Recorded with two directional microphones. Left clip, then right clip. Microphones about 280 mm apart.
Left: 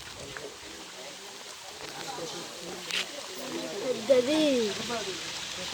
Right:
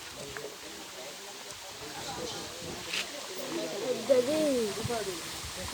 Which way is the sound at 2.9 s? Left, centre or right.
Centre.